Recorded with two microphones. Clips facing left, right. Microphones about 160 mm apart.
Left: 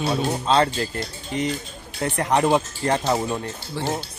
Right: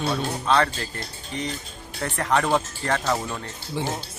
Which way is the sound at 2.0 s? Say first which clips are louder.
Left 3 dB; 20° left (ahead or behind).